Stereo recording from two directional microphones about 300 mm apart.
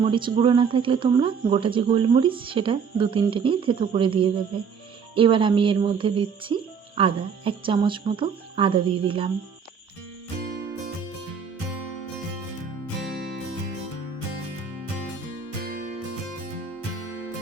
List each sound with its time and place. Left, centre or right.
0.0 s speech: centre
15.6 s music: right